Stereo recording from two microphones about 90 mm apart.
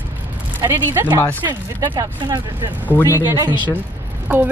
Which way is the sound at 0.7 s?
20° right (ahead or behind).